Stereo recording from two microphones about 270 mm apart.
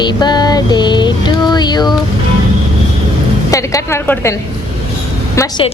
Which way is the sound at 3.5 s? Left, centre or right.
Centre.